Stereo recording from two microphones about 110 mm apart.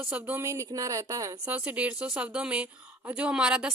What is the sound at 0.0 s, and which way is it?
Speech, 15° right (ahead or behind).